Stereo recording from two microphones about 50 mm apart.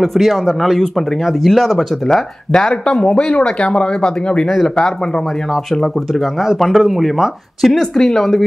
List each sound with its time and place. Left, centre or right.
0.0 s speech: centre
2.5 s speech: centre
5.5 s speech: centre